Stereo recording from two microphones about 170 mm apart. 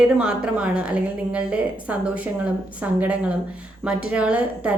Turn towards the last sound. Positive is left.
turn(degrees=-10)  # may be behind; listen again after turning